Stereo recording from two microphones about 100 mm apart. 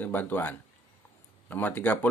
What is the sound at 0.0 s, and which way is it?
Speech, 20° left (ahead or behind).